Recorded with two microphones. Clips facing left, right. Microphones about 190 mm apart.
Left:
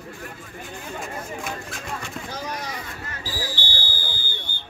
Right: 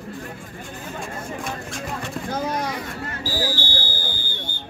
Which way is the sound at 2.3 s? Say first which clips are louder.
Right 8 dB; 55° right (ahead or behind).